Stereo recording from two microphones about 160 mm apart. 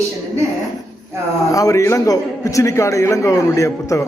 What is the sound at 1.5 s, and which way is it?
A man's voice, 20° left (ahead or behind).